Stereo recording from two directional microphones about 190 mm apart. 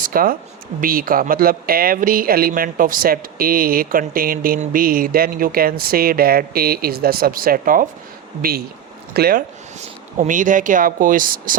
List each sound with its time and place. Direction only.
0.0 s speech: 50° right (ahead or behind)
9.8 s speech: 40° right (ahead or behind)